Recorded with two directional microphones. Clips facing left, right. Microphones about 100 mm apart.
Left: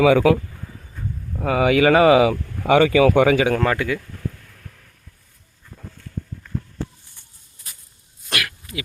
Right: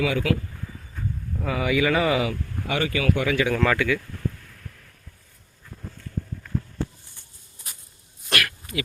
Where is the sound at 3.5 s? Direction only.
30° left (ahead or behind).